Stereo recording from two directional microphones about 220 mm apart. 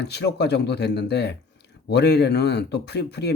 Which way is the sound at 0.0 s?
50° left (ahead or behind).